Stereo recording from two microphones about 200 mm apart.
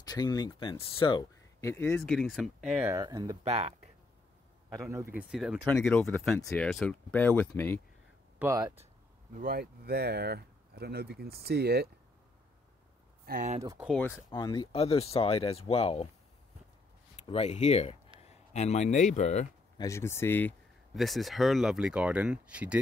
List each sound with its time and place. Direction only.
0.0 s speech: 20° left (ahead or behind)
1.6 s speech: 15° left (ahead or behind); by 2.9 s centre (ahead or behind)
2.9 s speech: 15° right (ahead or behind)
3.4 s speech: 35° right (ahead or behind)
4.7 s speech: 15° right (ahead or behind)
5.3 s speech: centre (ahead or behind)
8.4 s speech: 15° right (ahead or behind)
9.4 s speech: 50° right (ahead or behind)
13.2 s speech: 45° right (ahead or behind)
13.6 s speech: 15° right (ahead or behind)
13.8 s speech: 10° left (ahead or behind); by 16.1 s 30° left (ahead or behind)
17.3 s speech: 35° left (ahead or behind)
19.8 s speech: 15° left (ahead or behind); by 22.8 s 5° right (ahead or behind)